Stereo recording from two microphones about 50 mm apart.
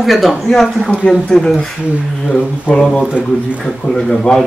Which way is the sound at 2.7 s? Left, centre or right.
Right.